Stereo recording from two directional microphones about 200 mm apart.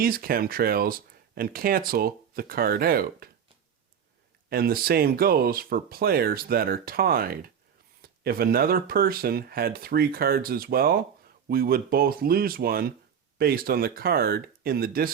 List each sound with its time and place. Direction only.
0.0 s speech: 45° right (ahead or behind)
4.4 s speech: 50° right (ahead or behind)